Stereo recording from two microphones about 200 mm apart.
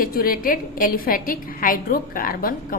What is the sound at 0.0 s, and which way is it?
A woman's voice, 45° left (ahead or behind).